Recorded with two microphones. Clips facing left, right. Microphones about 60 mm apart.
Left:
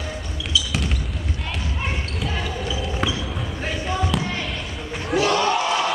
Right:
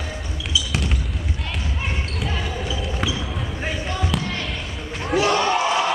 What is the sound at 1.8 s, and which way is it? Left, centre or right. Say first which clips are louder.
Basketball bounce: even; centre.